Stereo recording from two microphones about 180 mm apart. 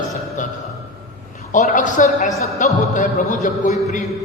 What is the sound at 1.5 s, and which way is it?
A man's voice, 45° left (ahead or behind).